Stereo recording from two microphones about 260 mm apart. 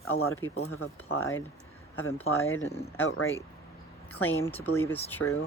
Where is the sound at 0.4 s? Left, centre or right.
Left.